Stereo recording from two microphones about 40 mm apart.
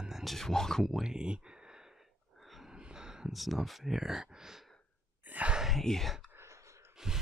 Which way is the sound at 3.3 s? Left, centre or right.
Centre.